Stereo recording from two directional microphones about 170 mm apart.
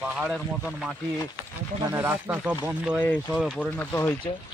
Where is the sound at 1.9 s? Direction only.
10° right (ahead or behind).